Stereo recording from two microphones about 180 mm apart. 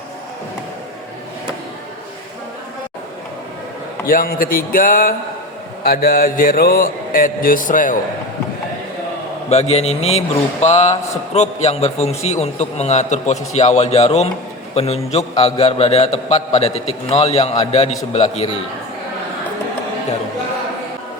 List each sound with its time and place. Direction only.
4.0 s mantra: 50° left (ahead or behind)
9.5 s a man's voice: 35° left (ahead or behind)